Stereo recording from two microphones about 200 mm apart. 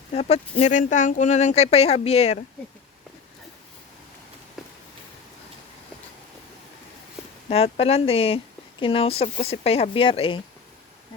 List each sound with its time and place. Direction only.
0.1 s speech: 30° left (ahead or behind)
7.5 s speech: 30° left (ahead or behind)